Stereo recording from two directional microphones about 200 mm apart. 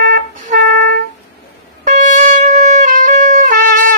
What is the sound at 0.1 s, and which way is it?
Music, 40° right (ahead or behind).